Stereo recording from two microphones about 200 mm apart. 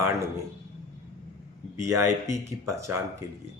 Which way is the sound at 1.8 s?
15° right (ahead or behind).